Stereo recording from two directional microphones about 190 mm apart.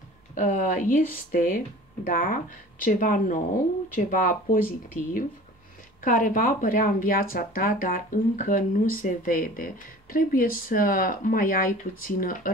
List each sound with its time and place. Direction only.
0.3 s speech: 40° left (ahead or behind)